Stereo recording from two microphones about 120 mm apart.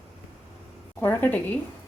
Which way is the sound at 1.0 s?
15° left (ahead or behind).